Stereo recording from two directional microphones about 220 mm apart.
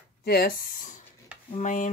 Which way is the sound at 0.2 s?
45° left (ahead or behind).